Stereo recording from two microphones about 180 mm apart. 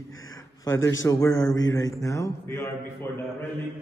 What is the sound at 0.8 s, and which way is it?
A man's voice, 15° left (ahead or behind).